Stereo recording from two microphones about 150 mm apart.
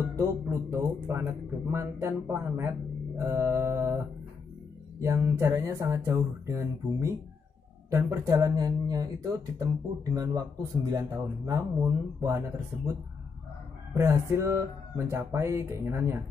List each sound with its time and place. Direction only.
0.1 s speech: 15° right (ahead or behind)
5.0 s speech: 20° right (ahead or behind)
13.9 s speech: 20° right (ahead or behind)